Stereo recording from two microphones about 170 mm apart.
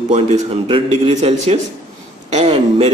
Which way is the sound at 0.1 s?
35° right (ahead or behind).